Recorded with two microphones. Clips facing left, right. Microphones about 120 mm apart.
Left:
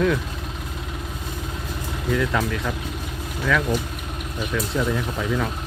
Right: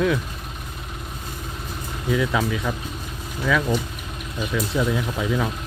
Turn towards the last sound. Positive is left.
turn(degrees=-5)  # may be behind; listen again after turning